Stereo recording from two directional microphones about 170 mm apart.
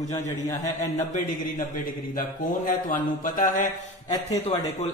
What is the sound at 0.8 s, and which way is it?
A man's voice, 50° left (ahead or behind).